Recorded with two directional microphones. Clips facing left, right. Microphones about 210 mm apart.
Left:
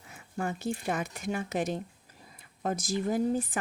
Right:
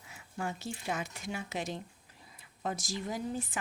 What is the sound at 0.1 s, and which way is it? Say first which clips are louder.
Speech: left 4 dB; 55° left (ahead or behind).